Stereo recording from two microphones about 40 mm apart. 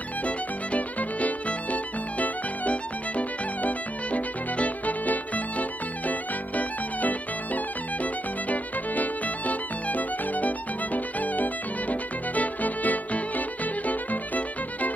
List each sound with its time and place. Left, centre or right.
0.2 s violin: left